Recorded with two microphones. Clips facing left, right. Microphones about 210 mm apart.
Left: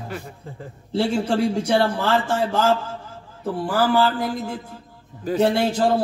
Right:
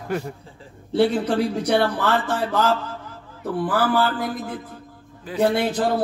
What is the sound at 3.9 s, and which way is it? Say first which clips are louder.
A man's voice: left 2 dB; 25° left (ahead or behind).